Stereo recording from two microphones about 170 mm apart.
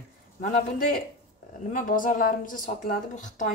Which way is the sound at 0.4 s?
50° left (ahead or behind).